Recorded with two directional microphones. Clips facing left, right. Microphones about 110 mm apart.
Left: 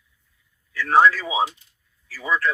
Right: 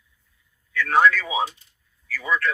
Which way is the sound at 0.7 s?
30° left (ahead or behind).